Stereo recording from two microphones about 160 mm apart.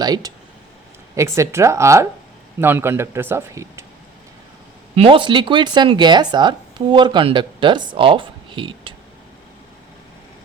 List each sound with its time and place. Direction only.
0.0 s speech: 25° right (ahead or behind)
4.9 s speech: 35° right (ahead or behind)